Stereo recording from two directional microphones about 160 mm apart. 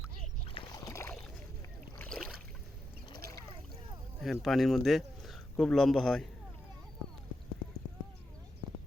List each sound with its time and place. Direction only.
0.4 s splash: 35° left (ahead or behind)
0.9 s boat: 15° left (ahead or behind)
2.0 s boat: 5° left (ahead or behind)
4.2 s speech: centre (ahead or behind)